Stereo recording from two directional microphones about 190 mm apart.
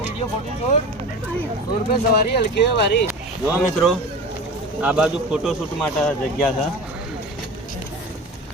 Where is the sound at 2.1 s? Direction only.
55° left (ahead or behind).